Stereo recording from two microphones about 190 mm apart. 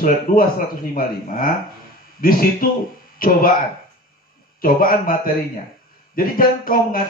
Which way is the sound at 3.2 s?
50° left (ahead or behind).